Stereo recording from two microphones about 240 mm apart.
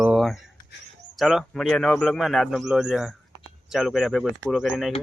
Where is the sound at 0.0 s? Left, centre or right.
Centre.